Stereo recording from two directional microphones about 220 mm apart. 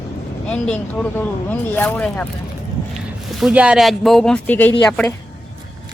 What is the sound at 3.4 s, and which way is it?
Speech, 5° right (ahead or behind).